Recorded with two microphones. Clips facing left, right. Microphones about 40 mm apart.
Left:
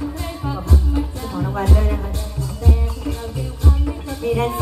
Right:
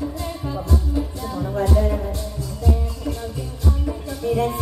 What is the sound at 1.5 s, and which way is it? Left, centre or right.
Music, left.